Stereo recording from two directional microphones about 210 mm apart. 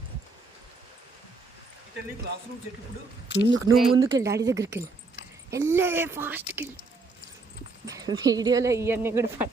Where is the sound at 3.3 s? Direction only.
55° left (ahead or behind).